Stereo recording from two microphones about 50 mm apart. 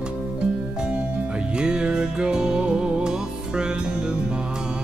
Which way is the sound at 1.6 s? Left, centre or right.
Centre.